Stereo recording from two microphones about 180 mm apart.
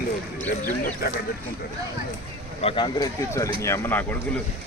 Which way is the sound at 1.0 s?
60° left (ahead or behind).